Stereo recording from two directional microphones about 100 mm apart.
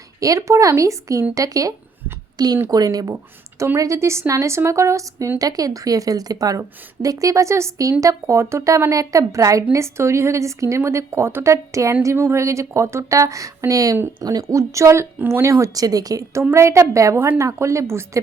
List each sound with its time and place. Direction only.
0.2 s a woman's voice: 35° right (ahead or behind)